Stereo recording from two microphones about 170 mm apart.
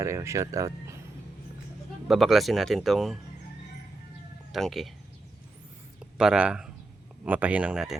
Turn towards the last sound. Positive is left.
turn(degrees=-5)  # may be behind; listen again after turning